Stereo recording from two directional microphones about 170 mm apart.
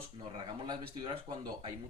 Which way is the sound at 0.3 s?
30° right (ahead or behind).